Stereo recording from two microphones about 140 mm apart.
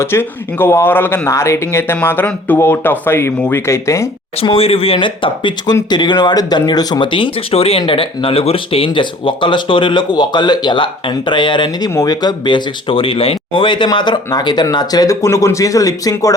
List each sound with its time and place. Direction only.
0.0 s speech: 15° left (ahead or behind)
4.4 s speech: 45° left (ahead or behind); by 16.3 s 25° left (ahead or behind)